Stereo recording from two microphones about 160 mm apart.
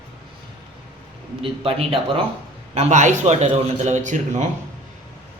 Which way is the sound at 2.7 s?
50° right (ahead or behind).